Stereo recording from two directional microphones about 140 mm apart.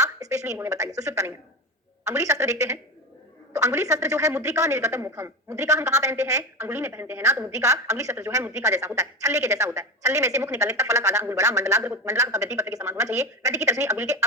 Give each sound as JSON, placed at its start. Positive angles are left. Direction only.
{"t": 0.0, "sound": "speech", "side_deg": -20}